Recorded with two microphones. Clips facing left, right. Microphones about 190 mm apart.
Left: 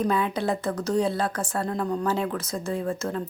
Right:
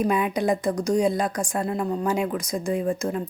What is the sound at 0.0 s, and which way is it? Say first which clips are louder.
A woman's voice: right 2 dB; 15° right (ahead or behind).